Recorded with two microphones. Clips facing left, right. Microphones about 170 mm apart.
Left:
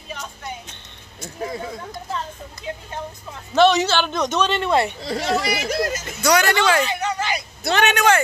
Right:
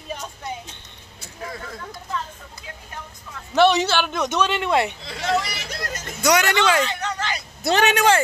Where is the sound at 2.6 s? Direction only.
25° left (ahead or behind).